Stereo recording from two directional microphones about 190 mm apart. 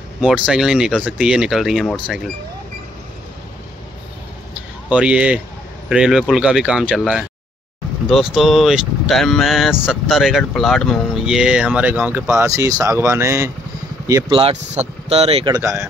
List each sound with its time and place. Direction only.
0.2 s speech: 5° right (ahead or behind)
4.8 s speech: 5° right (ahead or behind)
14.4 s speech: 35° right (ahead or behind); by 15.9 s 15° right (ahead or behind)